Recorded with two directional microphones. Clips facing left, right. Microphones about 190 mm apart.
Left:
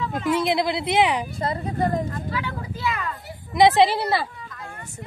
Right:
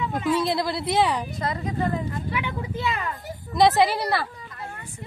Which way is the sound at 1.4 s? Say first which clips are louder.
Left 2 dB; 30° left (ahead or behind).